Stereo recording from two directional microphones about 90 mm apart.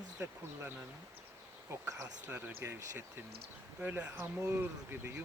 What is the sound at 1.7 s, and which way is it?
Speech, 35° right (ahead or behind).